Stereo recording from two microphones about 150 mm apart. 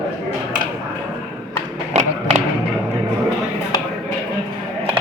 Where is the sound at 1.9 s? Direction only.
50° right (ahead or behind).